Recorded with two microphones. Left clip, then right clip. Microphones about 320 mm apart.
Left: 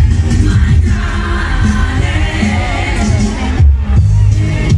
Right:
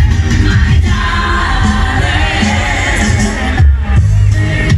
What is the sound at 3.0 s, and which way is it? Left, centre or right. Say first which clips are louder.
Music: right 3 dB; right.